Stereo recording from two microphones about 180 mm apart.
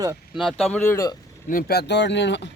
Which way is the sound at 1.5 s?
55° left (ahead or behind).